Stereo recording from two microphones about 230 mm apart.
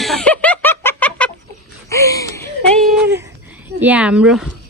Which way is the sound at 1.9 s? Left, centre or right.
Centre.